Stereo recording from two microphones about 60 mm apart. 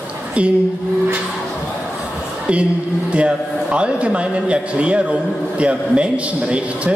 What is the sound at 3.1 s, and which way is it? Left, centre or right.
A man's voice, centre.